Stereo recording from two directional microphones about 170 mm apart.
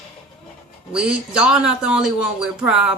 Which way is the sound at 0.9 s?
5° right (ahead or behind).